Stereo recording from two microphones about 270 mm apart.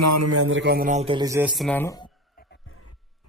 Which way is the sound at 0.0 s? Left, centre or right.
Right.